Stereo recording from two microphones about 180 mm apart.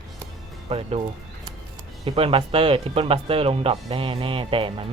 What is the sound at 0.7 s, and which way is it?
Speech, 35° right (ahead or behind).